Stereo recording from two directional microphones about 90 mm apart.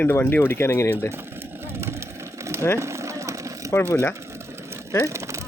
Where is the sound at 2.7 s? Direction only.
35° right (ahead or behind).